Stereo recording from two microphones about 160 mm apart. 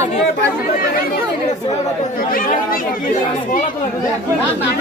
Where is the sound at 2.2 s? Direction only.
65° left (ahead or behind).